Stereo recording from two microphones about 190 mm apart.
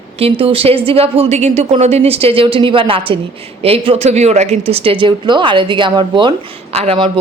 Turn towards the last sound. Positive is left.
turn(degrees=-30)  # may be behind; listen again after turning